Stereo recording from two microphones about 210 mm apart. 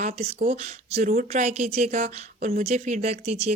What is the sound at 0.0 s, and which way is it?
A woman's voice, 40° right (ahead or behind).